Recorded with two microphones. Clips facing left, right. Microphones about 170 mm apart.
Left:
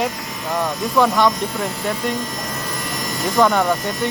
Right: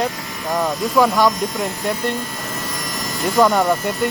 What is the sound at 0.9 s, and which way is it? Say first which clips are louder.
Speech: right 1 dB; 5° right (ahead or behind).